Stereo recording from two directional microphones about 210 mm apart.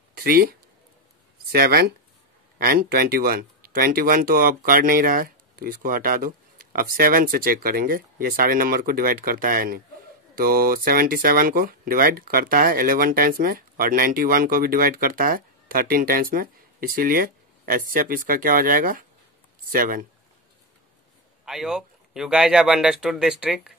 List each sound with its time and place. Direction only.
0.1 s speech: 45° right (ahead or behind)
21.5 s speech: centre (ahead or behind)